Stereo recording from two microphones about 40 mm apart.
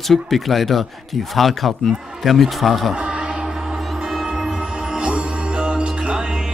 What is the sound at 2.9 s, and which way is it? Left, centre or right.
Music, right.